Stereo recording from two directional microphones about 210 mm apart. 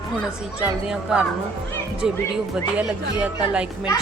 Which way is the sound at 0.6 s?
5° right (ahead or behind).